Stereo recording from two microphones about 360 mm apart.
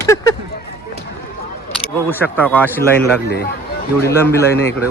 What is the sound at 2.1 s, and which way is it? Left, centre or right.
Speech, centre.